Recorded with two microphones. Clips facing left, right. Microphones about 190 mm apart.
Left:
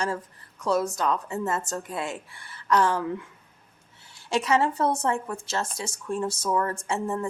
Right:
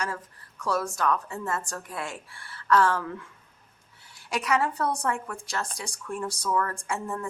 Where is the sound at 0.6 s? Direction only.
20° left (ahead or behind).